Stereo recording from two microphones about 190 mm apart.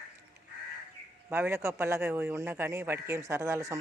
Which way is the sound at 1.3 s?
10° right (ahead or behind).